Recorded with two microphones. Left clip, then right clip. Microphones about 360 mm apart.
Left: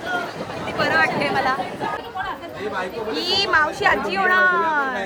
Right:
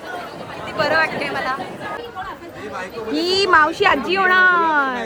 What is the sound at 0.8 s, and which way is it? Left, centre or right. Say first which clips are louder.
Speech: right 1 dB; centre.